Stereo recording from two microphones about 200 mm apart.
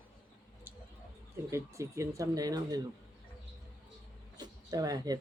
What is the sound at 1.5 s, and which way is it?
Speech, 15° right (ahead or behind).